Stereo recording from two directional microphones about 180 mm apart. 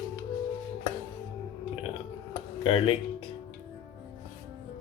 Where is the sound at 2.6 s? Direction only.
30° left (ahead or behind).